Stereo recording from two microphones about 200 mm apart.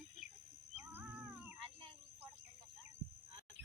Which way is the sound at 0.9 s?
10° right (ahead or behind).